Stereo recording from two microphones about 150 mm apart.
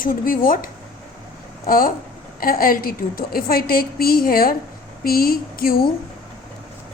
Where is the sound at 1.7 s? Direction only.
70° left (ahead or behind).